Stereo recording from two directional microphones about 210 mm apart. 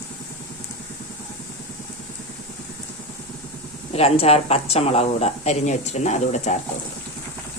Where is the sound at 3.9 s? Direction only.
30° left (ahead or behind).